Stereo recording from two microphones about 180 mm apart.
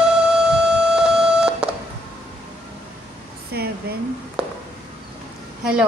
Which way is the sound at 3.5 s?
60° right (ahead or behind).